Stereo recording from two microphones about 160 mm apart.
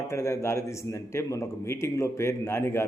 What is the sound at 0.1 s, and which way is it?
A man's voice, 20° left (ahead or behind).